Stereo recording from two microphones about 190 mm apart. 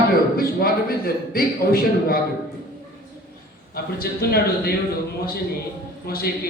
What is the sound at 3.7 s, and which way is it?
Speech, 55° left (ahead or behind).